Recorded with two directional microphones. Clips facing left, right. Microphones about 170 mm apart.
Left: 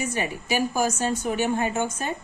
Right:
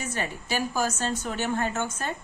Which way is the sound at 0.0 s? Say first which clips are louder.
Left 4 dB; 15° left (ahead or behind).